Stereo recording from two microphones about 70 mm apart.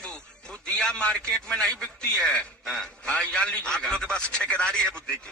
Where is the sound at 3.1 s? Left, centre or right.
Centre.